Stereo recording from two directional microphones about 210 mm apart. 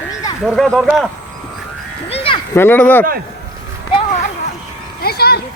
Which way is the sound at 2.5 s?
10° left (ahead or behind).